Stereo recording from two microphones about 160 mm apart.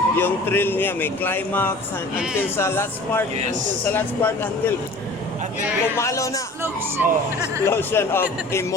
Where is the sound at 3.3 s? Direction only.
45° right (ahead or behind).